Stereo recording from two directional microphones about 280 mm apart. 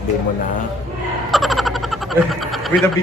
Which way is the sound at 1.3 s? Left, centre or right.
Centre.